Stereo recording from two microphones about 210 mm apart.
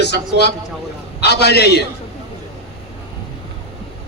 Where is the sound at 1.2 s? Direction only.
50° left (ahead or behind).